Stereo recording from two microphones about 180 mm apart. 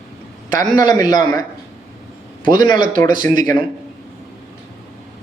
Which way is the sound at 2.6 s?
45° right (ahead or behind).